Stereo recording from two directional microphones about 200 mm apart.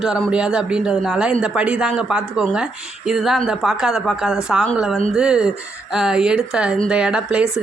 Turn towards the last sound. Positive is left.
turn(degrees=-5)  # may be behind; listen again after turning